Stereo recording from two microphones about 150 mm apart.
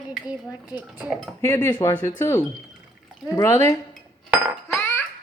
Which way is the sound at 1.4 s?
20° left (ahead or behind).